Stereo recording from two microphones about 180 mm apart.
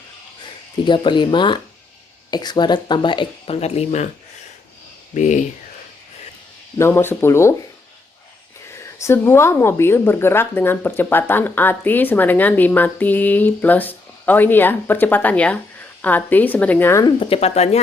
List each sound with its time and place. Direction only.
0.9 s speech: 25° left (ahead or behind)
5.1 s speech: 45° left (ahead or behind)
6.7 s speech: 15° left (ahead or behind)
9.0 s speech: 15° left (ahead or behind)
17.2 s speech: 30° left (ahead or behind)